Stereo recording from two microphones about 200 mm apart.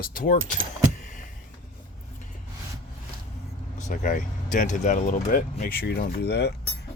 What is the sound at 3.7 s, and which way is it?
Speech, 40° left (ahead or behind).